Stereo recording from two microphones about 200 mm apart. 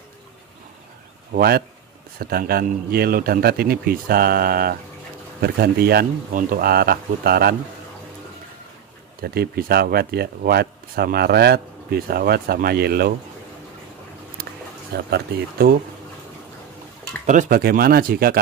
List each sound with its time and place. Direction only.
1.3 s speech: 50° right (ahead or behind)
9.2 s speech: 50° right (ahead or behind)
15.0 s speech: 55° right (ahead or behind)
17.3 s speech: 45° right (ahead or behind)